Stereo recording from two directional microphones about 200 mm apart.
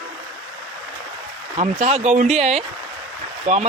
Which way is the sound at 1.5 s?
35° right (ahead or behind).